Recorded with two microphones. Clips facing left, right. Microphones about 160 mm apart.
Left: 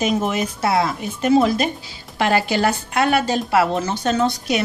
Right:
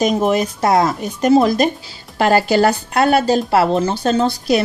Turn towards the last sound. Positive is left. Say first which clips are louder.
# right 4 dB
turn(degrees=-35)  # may be behind; listen again after turning